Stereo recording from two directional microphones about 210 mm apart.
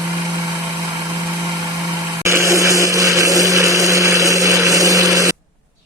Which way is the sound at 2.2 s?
15° right (ahead or behind).